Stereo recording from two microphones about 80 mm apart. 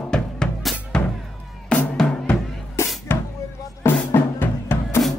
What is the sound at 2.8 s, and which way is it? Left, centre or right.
Music, left.